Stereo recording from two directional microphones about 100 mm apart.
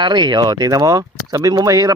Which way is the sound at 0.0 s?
45° right (ahead or behind).